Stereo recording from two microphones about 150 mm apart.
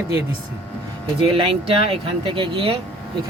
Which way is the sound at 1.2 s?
35° right (ahead or behind).